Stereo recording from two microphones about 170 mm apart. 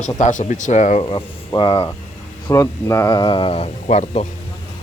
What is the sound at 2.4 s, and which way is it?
Speech, 20° left (ahead or behind).